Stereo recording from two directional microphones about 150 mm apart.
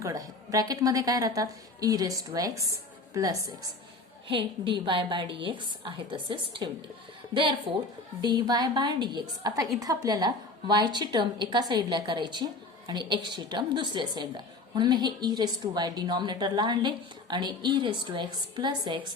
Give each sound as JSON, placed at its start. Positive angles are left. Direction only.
{"t": 0.0, "sound": "a woman's voice", "side_deg": -25}
{"t": 8.2, "sound": "a woman's voice", "side_deg": -30}